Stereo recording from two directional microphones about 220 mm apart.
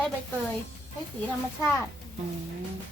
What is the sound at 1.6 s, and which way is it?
Speech, 10° left (ahead or behind).